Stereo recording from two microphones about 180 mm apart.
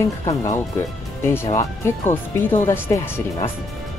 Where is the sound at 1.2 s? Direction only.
15° left (ahead or behind).